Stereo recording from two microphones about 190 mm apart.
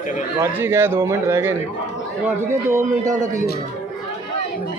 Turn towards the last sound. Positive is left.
turn(degrees=-40)  # may be behind; listen again after turning